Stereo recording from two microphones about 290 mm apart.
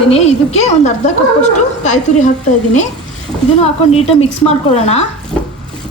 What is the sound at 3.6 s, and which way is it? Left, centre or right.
A woman's voice, left.